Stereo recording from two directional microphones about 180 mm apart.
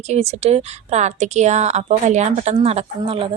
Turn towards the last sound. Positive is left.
turn(degrees=-30)  # may be behind; listen again after turning